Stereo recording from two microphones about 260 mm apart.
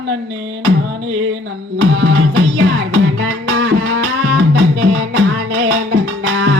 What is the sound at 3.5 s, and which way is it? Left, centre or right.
Music, right.